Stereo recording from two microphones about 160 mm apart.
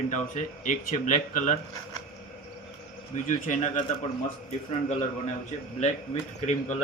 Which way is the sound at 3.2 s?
50° left (ahead or behind).